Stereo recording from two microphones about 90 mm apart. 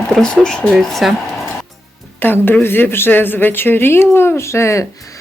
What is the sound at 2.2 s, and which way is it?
A woman's voice, 20° left (ahead or behind).